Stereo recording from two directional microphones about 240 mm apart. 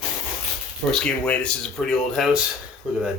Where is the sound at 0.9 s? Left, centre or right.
Centre.